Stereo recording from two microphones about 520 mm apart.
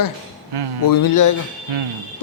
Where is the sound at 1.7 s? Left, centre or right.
Right.